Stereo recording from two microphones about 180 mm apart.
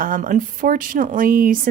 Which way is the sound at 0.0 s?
50° right (ahead or behind).